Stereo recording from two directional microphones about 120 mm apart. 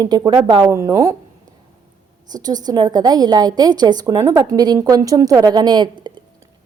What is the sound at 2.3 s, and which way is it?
A woman's voice, 35° right (ahead or behind).